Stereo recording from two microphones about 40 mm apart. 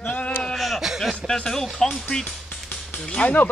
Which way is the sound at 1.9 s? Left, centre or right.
Centre.